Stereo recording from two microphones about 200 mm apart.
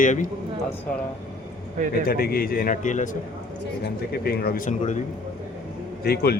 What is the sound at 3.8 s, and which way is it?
A man's voice, 50° left (ahead or behind).